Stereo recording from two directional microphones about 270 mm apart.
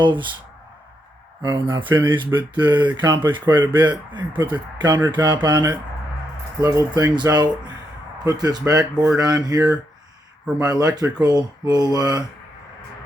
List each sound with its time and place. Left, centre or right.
0.0 s speech: centre
1.4 s speech: centre